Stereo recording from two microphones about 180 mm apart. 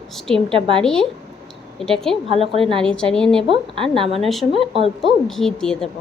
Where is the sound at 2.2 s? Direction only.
30° right (ahead or behind).